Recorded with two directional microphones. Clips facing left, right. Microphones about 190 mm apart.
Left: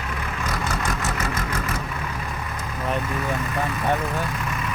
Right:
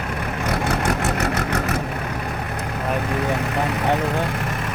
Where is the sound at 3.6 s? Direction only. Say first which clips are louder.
Right 3 dB; 75° right (ahead or behind).